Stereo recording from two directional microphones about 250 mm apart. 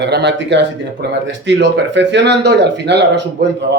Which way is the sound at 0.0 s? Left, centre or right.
Right.